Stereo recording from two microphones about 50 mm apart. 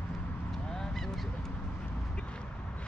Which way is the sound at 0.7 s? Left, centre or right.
Centre.